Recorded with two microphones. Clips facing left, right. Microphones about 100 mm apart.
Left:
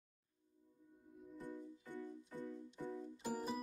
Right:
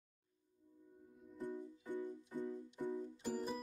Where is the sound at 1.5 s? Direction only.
15° right (ahead or behind).